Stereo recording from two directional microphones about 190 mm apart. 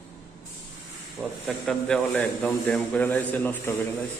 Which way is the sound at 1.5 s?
5° left (ahead or behind).